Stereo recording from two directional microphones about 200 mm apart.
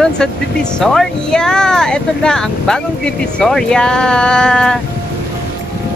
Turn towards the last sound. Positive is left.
turn(degrees=5)  # may be behind; listen again after turning